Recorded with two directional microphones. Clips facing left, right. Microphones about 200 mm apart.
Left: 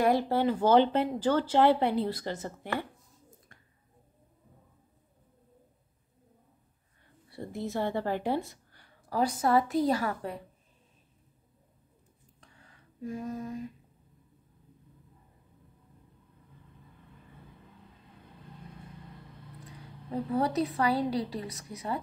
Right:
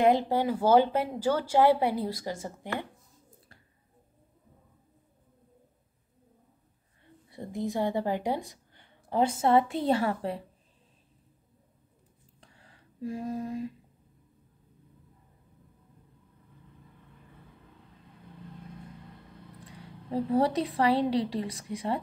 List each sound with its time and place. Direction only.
0.0 s speech: 15° right (ahead or behind)
7.2 s speech: 15° right (ahead or behind)
12.4 s a sound: 30° right (ahead or behind)
20.1 s a woman's voice: 30° right (ahead or behind)